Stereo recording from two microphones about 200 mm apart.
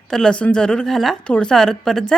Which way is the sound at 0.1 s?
5° left (ahead or behind).